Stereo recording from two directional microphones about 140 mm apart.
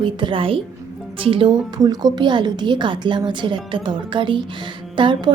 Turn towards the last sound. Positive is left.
turn(degrees=-35)  # may be behind; listen again after turning